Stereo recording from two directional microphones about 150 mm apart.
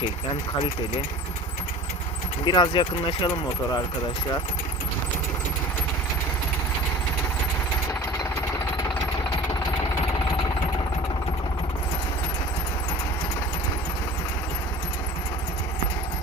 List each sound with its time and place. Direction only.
2.4 s speech: 30° left (ahead or behind)